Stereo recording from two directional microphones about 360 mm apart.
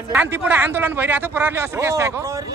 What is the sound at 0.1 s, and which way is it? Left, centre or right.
A man's voice, centre.